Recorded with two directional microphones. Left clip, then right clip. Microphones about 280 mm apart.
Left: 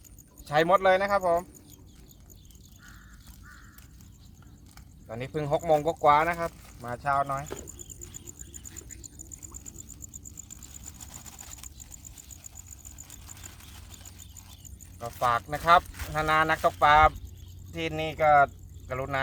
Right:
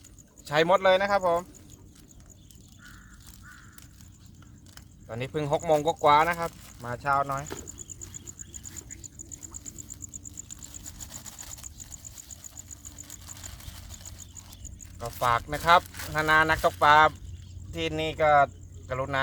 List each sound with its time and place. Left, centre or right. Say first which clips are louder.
0.4 s speech: even; centre
5.0 s speech: right 1 dB; right
11.0 s sewing machine: right 4 dB; centre
13.1 s a sound: right 4 dB; centre
14.9 s speech: right 1 dB; centre